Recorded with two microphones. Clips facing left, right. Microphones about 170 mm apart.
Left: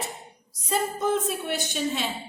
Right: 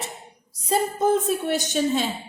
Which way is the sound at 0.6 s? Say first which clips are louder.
Right 4 dB; 35° right (ahead or behind).